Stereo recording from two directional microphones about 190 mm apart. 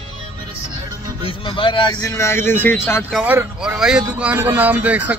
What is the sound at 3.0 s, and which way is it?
Speech, 5° right (ahead or behind).